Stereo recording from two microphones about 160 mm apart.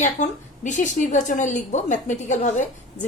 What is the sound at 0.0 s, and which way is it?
A woman's voice, 50° left (ahead or behind).